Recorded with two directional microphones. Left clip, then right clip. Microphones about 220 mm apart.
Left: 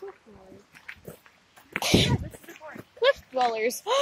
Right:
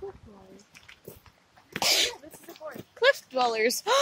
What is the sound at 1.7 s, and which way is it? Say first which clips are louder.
Sneeze: left 1 dB; centre (ahead or behind).